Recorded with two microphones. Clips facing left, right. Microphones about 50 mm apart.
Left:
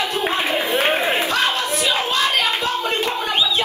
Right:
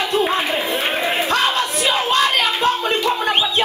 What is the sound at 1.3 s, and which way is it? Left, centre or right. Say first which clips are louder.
Battle cry: right 2 dB; right.